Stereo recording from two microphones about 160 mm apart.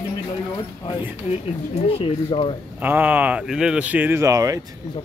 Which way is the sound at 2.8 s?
10° right (ahead or behind).